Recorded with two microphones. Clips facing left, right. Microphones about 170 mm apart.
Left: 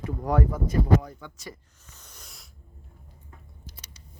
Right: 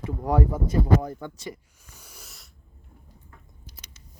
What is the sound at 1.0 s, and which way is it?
Speech, 50° right (ahead or behind).